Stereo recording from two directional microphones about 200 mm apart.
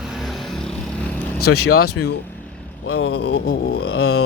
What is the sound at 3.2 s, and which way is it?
Speech, 50° left (ahead or behind).